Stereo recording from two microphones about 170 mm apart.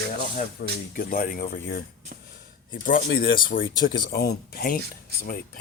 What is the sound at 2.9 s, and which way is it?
Speech, 65° left (ahead or behind).